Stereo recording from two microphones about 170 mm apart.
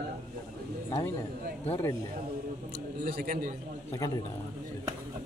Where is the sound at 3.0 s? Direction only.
60° right (ahead or behind).